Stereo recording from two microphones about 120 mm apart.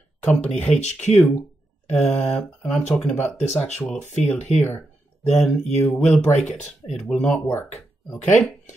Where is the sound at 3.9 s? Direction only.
75° left (ahead or behind).